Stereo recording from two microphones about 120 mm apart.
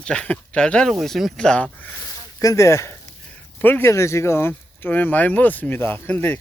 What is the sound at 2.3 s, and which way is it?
Speech, 25° left (ahead or behind).